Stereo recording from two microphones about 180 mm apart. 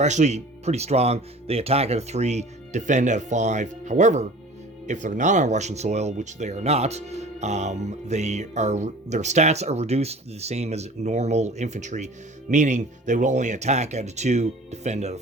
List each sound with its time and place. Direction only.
0.0 s speech: 40° right (ahead or behind)